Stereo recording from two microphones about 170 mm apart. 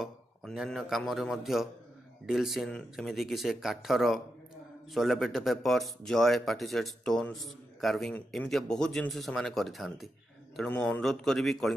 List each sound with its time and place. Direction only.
0.0 s a man's voice: centre (ahead or behind)